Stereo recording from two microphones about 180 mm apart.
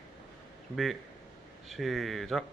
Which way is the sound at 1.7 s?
Centre (ahead or behind).